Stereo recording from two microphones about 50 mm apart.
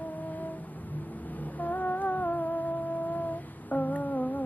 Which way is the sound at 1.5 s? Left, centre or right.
Left.